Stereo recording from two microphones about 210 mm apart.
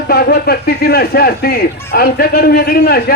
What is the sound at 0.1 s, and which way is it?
Speech, 50° left (ahead or behind).